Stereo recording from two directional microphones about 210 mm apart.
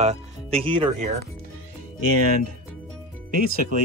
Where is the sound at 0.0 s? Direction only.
30° right (ahead or behind).